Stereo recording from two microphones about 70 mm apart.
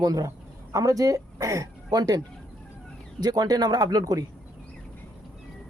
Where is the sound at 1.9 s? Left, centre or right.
Right.